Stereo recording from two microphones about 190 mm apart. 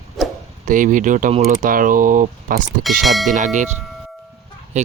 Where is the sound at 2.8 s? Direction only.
Centre (ahead or behind).